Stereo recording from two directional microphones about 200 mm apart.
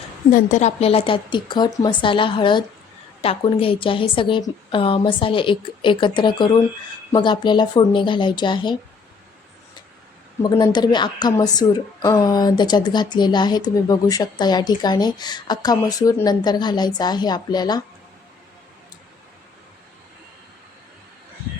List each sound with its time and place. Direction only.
0.3 s a woman's voice: 40° left (ahead or behind); by 8.8 s 25° left (ahead or behind)
10.4 s a woman's voice: 20° left (ahead or behind)